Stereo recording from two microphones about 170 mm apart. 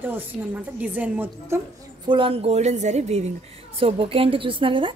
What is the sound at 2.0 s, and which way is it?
A woman's voice, 30° right (ahead or behind).